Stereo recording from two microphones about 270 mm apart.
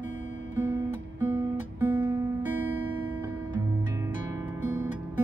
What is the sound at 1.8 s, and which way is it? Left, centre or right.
Music, centre.